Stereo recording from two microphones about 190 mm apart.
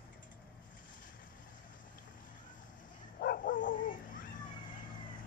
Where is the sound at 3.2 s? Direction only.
50° left (ahead or behind).